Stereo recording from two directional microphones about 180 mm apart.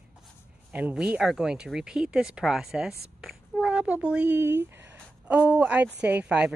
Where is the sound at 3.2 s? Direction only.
5° right (ahead or behind).